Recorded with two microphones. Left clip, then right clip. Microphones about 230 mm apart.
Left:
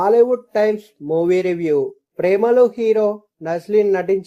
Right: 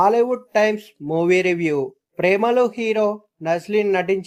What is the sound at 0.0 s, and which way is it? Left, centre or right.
Speech, right.